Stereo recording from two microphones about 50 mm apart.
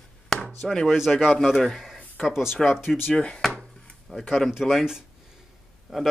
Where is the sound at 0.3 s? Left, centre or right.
Centre.